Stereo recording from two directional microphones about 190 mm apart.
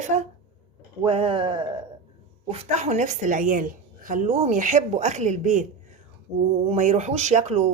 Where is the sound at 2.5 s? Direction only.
35° right (ahead or behind).